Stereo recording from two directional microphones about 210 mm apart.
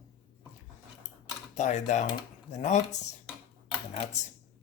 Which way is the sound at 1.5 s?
35° left (ahead or behind).